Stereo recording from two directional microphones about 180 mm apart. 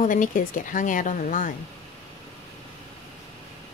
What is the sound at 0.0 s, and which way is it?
A woman's voice, 45° left (ahead or behind).